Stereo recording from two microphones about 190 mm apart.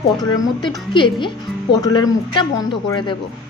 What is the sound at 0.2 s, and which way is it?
A woman's voice, 25° left (ahead or behind).